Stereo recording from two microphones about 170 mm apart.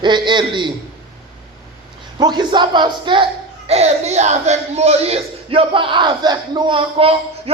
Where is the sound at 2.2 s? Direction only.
25° right (ahead or behind).